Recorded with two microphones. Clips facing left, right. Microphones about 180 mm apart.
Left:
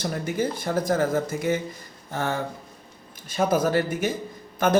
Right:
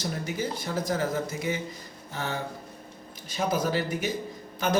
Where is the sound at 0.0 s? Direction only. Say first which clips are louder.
Left 5 dB; 55° left (ahead or behind).